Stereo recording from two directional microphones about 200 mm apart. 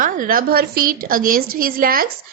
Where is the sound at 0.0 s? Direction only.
45° right (ahead or behind).